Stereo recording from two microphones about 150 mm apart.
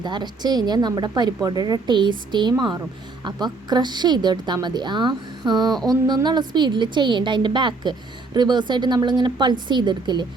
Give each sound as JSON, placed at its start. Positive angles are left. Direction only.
{"t": 0.0, "sound": "a woman's voice", "side_deg": -30}